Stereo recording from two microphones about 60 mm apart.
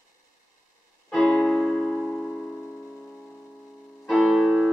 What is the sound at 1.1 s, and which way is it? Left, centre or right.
Keyboard, centre.